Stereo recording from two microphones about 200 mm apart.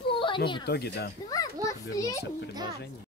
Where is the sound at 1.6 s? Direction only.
15° left (ahead or behind).